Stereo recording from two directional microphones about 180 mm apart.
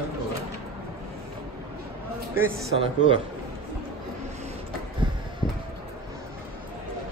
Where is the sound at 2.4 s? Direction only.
15° right (ahead or behind).